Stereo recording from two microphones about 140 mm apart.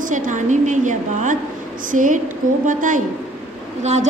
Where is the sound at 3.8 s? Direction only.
55° right (ahead or behind).